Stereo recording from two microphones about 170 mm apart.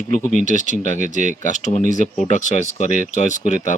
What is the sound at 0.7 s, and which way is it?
Speech, 45° right (ahead or behind).